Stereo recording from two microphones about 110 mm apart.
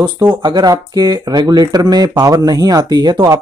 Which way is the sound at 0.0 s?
45° right (ahead or behind).